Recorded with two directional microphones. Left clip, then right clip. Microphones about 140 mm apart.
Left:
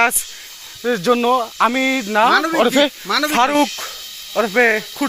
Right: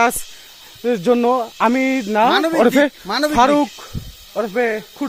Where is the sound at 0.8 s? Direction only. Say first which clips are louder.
Even; 45° right (ahead or behind).